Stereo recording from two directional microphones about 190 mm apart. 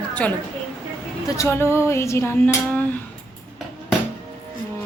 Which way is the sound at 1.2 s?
15° left (ahead or behind).